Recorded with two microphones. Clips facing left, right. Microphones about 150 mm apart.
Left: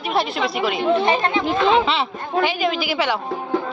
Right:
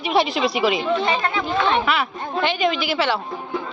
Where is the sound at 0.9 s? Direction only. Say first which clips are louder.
Left 3 dB; 30° left (ahead or behind).